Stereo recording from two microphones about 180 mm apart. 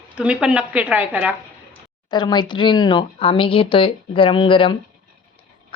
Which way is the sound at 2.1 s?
25° left (ahead or behind).